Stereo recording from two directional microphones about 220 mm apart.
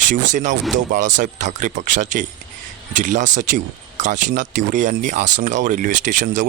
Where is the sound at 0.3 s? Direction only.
35° right (ahead or behind).